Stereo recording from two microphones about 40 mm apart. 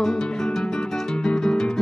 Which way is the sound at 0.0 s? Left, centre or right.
Centre.